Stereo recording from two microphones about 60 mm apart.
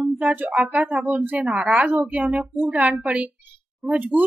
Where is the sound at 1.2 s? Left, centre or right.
Right.